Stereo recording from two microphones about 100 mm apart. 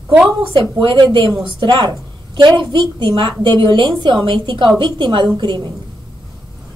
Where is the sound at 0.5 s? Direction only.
55° right (ahead or behind).